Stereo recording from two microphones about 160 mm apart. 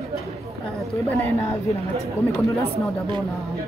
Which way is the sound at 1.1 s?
20° left (ahead or behind).